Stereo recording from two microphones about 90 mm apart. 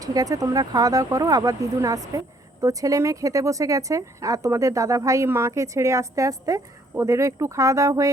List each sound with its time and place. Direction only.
0.0 s a woman's voice: 45° right (ahead or behind)